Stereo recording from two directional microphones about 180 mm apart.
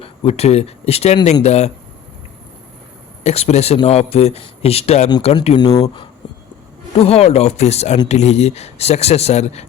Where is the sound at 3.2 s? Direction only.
35° left (ahead or behind).